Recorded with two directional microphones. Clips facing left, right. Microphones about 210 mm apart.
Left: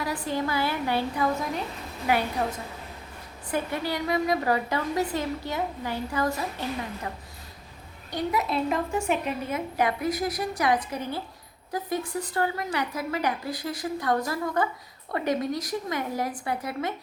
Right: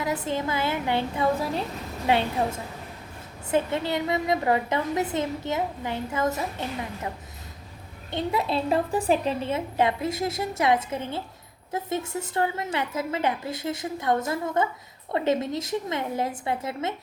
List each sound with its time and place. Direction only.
0.0 s a woman's voice: 20° right (ahead or behind)
8.1 s a woman's voice: 30° right (ahead or behind)